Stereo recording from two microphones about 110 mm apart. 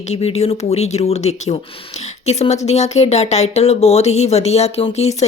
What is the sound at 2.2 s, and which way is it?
Speech, 85° left.